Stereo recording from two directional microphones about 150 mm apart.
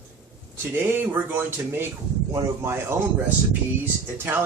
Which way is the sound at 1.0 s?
15° right (ahead or behind).